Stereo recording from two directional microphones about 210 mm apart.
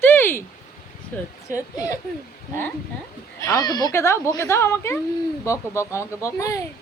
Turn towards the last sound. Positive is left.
turn(degrees=15)  # may be behind; listen again after turning